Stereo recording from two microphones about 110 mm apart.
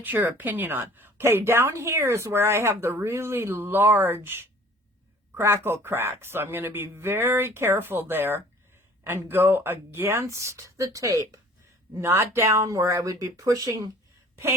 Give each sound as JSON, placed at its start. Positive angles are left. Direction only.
{"t": 0.0, "sound": "a woman's voice", "side_deg": -15}